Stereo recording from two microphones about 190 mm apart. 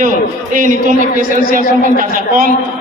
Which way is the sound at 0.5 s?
45° right (ahead or behind).